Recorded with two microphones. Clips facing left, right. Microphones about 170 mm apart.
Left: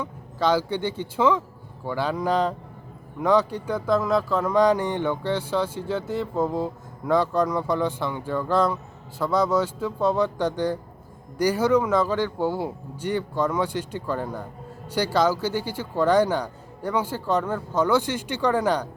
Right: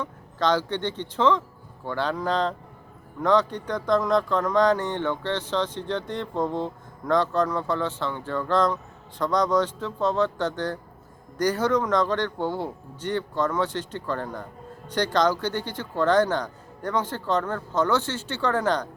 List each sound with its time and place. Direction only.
0.0 s speech: 10° left (ahead or behind)